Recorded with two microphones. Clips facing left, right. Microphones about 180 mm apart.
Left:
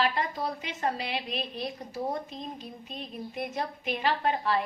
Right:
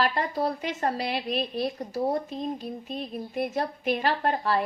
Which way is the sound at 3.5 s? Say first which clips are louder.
Right 5 dB; 45° right (ahead or behind).